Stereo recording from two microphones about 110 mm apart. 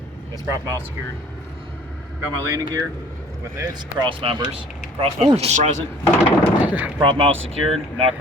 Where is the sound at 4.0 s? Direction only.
55° right (ahead or behind).